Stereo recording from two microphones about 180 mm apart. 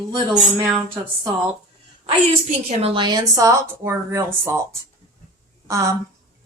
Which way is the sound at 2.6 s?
30° right (ahead or behind).